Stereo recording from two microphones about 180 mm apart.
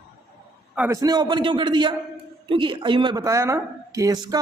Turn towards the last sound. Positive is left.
turn(degrees=-20)  # may be behind; listen again after turning